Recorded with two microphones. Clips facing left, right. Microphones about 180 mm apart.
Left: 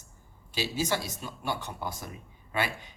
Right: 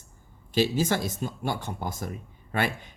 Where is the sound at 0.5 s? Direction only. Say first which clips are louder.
Right 6 dB; 50° right (ahead or behind).